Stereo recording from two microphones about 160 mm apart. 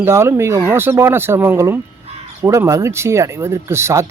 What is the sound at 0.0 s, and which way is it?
Speech, 15° right (ahead or behind).